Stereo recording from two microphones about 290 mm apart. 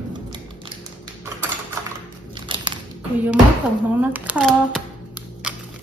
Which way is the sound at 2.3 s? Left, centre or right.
Centre.